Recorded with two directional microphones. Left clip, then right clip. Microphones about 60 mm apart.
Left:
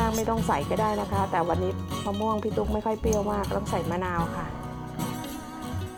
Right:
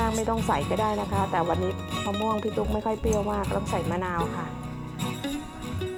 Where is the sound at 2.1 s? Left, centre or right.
Right.